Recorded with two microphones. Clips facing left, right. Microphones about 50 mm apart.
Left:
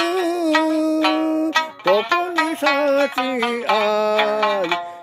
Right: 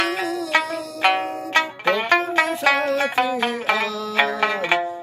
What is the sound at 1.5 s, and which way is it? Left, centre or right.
Music, right.